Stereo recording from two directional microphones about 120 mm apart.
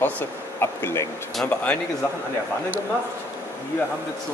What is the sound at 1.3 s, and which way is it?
Speech, 10° left (ahead or behind).